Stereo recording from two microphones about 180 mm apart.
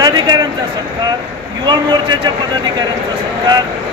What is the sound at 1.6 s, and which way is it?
Speech, 25° right (ahead or behind).